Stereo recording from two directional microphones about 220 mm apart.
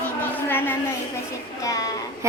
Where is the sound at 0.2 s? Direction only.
10° left (ahead or behind).